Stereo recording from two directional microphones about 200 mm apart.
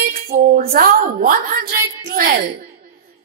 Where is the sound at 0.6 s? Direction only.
45° right (ahead or behind).